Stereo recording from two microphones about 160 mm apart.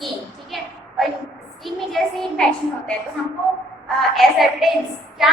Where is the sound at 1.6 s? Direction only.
Centre (ahead or behind).